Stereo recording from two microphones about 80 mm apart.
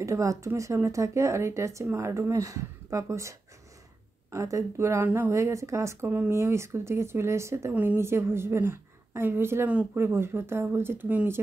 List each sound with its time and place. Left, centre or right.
0.0 s speech: right
5.0 s speech: right
5.3 s speech: right
7.7 s speech: right
8.0 s speech: right